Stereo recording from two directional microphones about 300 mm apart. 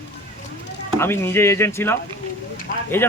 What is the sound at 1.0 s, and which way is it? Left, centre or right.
Speech, centre.